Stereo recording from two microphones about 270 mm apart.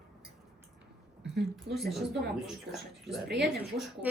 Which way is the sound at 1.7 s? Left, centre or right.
Centre.